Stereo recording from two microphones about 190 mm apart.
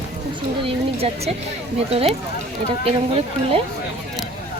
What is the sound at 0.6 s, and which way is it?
Speech, 30° right (ahead or behind).